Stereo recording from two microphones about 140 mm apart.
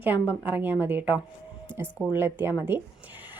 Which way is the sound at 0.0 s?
10° right (ahead or behind).